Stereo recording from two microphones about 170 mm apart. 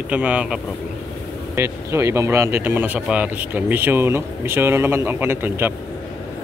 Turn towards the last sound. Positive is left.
turn(degrees=-10)  # may be behind; listen again after turning